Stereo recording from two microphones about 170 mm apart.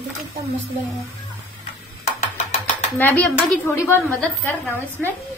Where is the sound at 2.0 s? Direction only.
45° left (ahead or behind).